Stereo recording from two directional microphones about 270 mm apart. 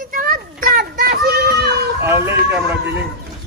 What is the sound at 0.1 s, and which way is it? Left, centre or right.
Child singing, right.